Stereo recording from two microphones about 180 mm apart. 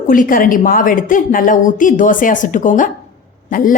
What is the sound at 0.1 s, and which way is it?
A woman's voice, 50° left (ahead or behind).